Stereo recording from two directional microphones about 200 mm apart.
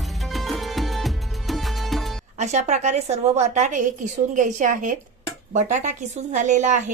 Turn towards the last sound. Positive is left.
turn(degrees=-35)  # may be behind; listen again after turning